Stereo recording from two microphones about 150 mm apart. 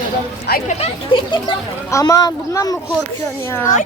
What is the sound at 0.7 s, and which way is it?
Speech, 40° left (ahead or behind).